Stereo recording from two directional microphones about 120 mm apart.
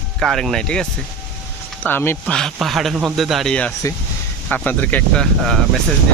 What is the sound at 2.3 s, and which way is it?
Speech, centre (ahead or behind).